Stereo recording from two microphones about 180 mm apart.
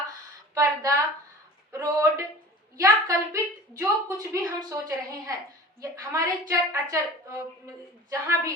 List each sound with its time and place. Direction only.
0.5 s a woman's voice: 20° right (ahead or behind)